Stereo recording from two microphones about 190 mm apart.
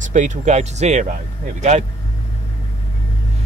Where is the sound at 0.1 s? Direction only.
40° right (ahead or behind).